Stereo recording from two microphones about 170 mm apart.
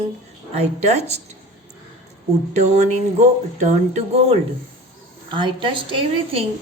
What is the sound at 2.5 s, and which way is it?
A woman's voice, 40° right (ahead or behind).